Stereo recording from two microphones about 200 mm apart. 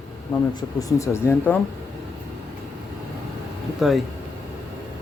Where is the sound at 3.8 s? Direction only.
Centre (ahead or behind).